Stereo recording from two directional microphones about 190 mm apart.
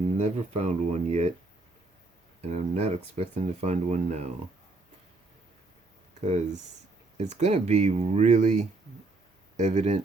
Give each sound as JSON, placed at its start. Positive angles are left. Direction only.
{"t": 0.2, "sound": "speech", "side_deg": -35}
{"t": 2.4, "sound": "speech", "side_deg": -35}
{"t": 6.2, "sound": "speech", "side_deg": -35}